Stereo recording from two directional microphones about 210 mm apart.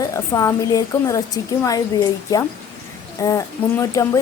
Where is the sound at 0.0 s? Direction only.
15° left (ahead or behind).